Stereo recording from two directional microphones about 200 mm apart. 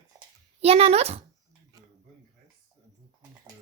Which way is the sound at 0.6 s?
30° right (ahead or behind).